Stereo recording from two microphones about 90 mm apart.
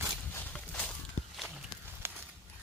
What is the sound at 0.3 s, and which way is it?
Clip-clop, 20° left (ahead or behind).